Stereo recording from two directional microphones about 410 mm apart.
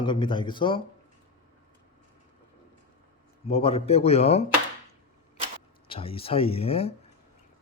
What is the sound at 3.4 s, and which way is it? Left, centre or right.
Speech, centre.